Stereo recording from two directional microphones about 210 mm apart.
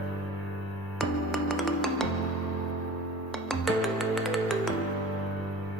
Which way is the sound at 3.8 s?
Centre (ahead or behind).